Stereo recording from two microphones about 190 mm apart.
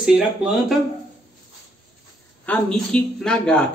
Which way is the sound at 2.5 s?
5° left (ahead or behind).